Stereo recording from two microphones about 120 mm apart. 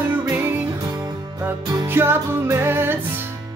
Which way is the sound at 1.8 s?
20° right (ahead or behind).